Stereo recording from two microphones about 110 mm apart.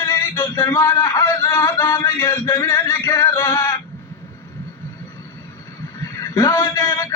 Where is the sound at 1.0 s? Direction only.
25° left (ahead or behind).